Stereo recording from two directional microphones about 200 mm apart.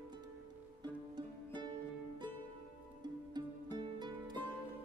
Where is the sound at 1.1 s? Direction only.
20° right (ahead or behind).